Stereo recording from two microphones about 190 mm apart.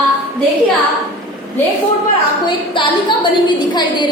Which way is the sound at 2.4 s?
25° left (ahead or behind).